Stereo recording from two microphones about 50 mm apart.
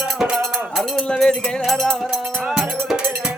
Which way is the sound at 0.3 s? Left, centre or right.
Centre.